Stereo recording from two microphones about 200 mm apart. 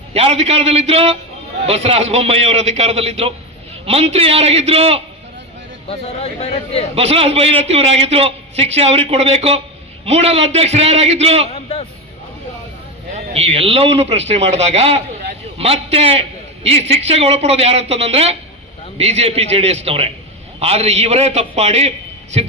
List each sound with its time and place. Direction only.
0.1 s a man's voice: 30° right (ahead or behind)
5.9 s speech: 30° left (ahead or behind)
6.9 s a man's voice: 30° right (ahead or behind)
11.5 s a sound: 30° left (ahead or behind)
13.1 s a man's voice: 30° right (ahead or behind)